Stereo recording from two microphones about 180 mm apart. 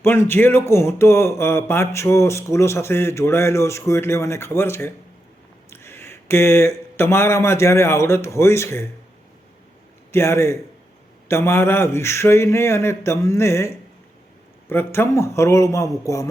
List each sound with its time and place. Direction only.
0.0 s speech: 15° left (ahead or behind)
10.1 s speech: 15° left (ahead or behind)